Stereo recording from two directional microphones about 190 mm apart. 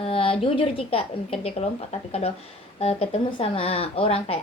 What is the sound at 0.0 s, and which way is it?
A woman's voice, 30° left (ahead or behind).